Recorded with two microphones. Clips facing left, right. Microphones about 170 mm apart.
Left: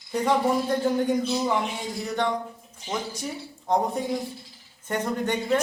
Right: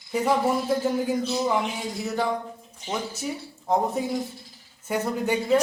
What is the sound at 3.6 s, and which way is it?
Speech, 5° right (ahead or behind).